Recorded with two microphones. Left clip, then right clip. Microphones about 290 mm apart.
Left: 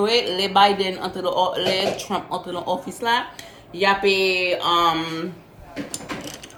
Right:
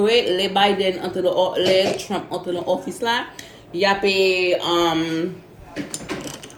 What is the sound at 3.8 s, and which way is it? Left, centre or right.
Speech, centre.